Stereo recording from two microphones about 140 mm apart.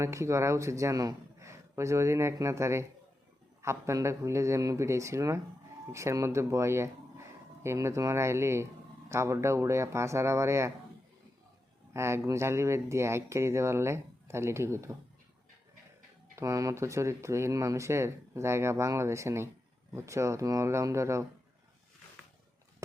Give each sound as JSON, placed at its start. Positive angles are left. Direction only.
{"t": 0.0, "sound": "a man's voice", "side_deg": -20}
{"t": 11.9, "sound": "speech", "side_deg": -20}
{"t": 16.3, "sound": "speech", "side_deg": -20}